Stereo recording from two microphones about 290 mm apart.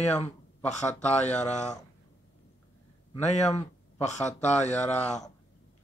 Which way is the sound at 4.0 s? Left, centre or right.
Left.